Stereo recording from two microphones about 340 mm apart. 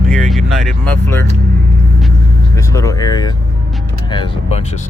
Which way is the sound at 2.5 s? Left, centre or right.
Centre.